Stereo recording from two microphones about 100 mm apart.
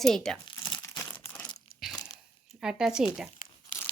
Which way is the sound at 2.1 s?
5° right (ahead or behind).